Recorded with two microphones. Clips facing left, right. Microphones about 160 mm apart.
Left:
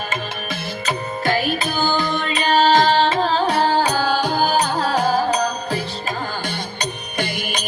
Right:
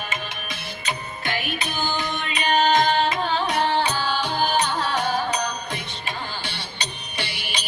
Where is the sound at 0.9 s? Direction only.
40° left (ahead or behind).